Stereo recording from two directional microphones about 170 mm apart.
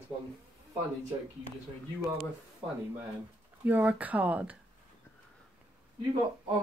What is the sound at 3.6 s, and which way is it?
Speech, 10° right (ahead or behind).